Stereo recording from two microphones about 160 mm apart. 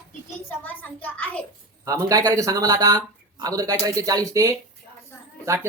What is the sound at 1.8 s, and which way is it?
Speech, 20° right (ahead or behind).